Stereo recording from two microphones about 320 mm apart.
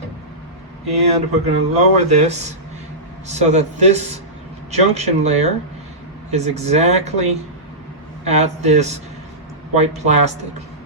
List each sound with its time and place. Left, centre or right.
0.9 s speech: centre